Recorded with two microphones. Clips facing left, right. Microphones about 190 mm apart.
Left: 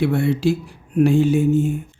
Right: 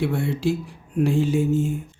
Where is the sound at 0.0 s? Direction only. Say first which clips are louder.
Left 5 dB; 75° left (ahead or behind).